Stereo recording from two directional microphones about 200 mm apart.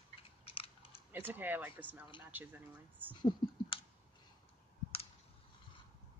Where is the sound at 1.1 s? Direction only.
10° right (ahead or behind).